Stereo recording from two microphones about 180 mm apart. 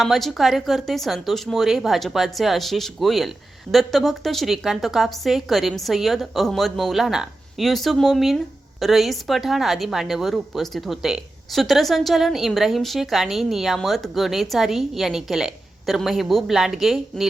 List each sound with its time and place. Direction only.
0.0 s speech: centre (ahead or behind)